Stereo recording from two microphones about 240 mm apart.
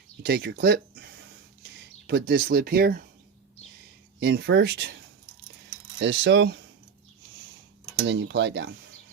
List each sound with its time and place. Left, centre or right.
0.2 s a sound: right
1.8 s speech: right
4.2 s speech: right
6.0 s speech: right
8.0 s speech: right